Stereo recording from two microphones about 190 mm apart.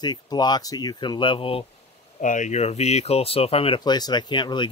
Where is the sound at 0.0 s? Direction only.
20° left (ahead or behind).